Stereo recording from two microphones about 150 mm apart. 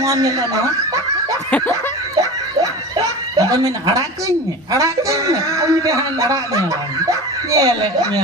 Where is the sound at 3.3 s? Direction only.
20° right (ahead or behind).